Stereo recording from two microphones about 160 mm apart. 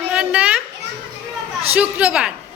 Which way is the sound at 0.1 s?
5° right (ahead or behind).